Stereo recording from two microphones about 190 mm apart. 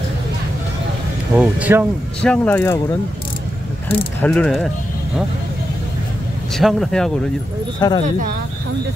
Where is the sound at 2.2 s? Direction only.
5° left (ahead or behind).